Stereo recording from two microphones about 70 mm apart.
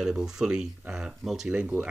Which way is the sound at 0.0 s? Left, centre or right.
Centre.